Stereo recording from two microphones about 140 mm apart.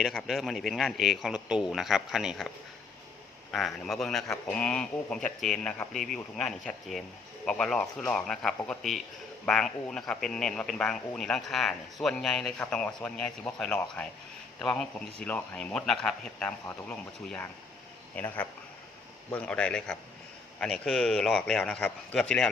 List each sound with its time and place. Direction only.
0.0 s a man's voice: centre (ahead or behind)
3.5 s a man's voice: centre (ahead or behind)
19.3 s a man's voice: 5° left (ahead or behind)